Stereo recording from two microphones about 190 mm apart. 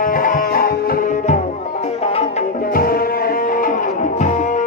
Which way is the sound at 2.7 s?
50° left (ahead or behind).